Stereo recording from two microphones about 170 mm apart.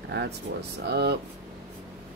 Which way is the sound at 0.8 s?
75° right (ahead or behind).